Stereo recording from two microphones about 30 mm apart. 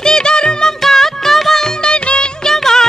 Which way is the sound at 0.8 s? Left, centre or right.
Centre.